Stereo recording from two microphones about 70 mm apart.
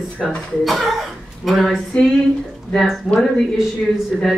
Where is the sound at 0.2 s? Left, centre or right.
Centre.